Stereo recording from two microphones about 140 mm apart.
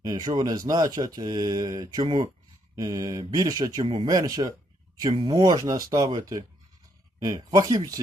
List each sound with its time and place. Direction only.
0.0 s speech: 25° right (ahead or behind)